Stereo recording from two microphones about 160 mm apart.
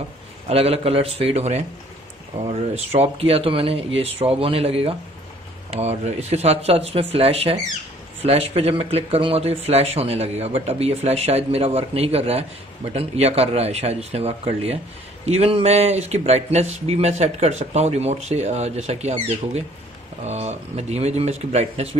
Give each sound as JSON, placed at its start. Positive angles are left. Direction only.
{"t": 0.5, "sound": "speech", "side_deg": -40}